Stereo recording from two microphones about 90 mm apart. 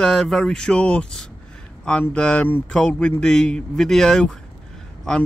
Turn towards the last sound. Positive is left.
turn(degrees=10)  # may be behind; listen again after turning